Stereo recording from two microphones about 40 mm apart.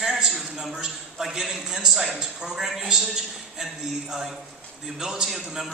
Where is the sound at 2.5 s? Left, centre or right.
Centre.